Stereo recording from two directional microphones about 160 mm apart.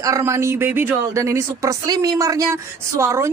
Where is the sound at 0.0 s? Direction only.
20° right (ahead or behind).